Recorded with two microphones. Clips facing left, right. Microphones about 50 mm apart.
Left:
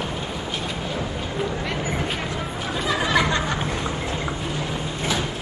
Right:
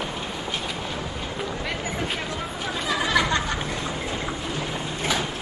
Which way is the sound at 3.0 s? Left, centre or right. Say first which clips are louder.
Left 1 dB; left.